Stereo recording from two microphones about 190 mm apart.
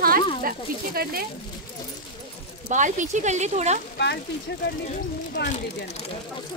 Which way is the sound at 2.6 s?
40° right (ahead or behind).